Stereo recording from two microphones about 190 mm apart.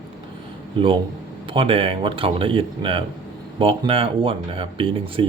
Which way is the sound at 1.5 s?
30° right (ahead or behind).